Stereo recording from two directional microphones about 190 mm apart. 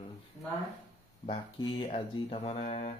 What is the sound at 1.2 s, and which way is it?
Speech, 25° left (ahead or behind).